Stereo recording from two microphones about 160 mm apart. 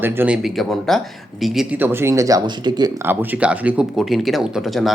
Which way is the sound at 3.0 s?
10° right (ahead or behind).